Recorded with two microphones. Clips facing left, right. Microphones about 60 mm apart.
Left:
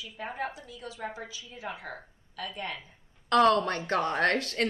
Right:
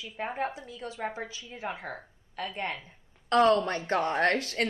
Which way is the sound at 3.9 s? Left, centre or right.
Right.